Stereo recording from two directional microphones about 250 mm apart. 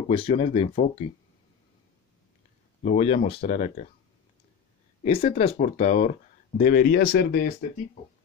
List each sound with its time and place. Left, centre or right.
0.1 s speech: left
2.8 s speech: left
5.0 s speech: left